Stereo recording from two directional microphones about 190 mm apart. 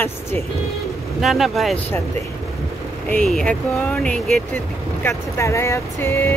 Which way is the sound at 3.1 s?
5° left (ahead or behind).